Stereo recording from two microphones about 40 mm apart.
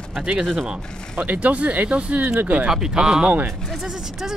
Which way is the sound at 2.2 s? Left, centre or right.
Right.